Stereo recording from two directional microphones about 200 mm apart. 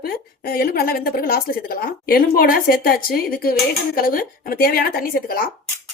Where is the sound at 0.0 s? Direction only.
50° left (ahead or behind).